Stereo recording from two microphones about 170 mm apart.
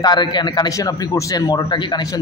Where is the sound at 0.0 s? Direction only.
25° left (ahead or behind).